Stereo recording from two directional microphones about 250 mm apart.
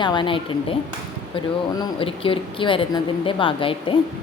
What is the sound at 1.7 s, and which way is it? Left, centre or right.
Speech, centre.